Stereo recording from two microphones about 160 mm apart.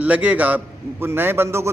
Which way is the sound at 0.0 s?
10° right (ahead or behind).